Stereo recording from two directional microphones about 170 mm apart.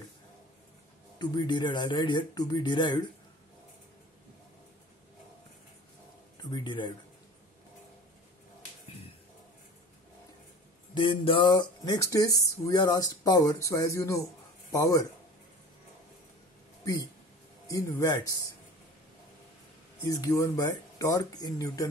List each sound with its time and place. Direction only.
1.1 s speech: 25° left (ahead or behind)
6.5 s speech: 30° left (ahead or behind)
11.0 s speech: 30° left (ahead or behind)
17.6 s speech: 20° left (ahead or behind)
20.1 s speech: 20° left (ahead or behind)